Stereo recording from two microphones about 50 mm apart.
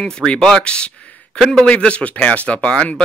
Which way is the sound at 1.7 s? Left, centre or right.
Left.